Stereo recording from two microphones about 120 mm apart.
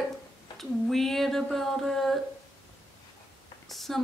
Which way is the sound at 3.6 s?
Centre (ahead or behind).